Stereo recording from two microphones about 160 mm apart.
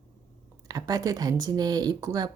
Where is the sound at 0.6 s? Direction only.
25° right (ahead or behind).